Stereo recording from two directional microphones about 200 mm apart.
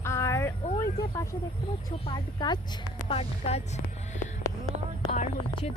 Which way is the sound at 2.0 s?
20° left (ahead or behind).